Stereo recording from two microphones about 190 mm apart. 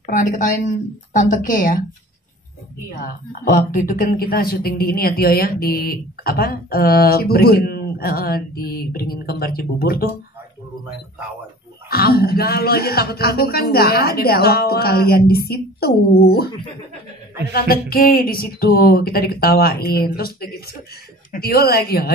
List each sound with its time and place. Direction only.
0.0 s a woman's voice: 45° left (ahead or behind)
3.0 s a woman's voice: 45° left (ahead or behind)
11.9 s a woman's voice: 50° left (ahead or behind)
17.5 s a woman's voice: 50° left (ahead or behind)